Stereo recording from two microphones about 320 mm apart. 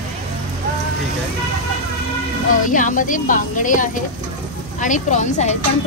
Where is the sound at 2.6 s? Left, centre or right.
Left.